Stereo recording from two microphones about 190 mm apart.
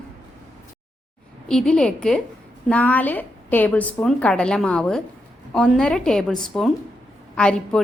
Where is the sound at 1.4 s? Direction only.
5° left (ahead or behind).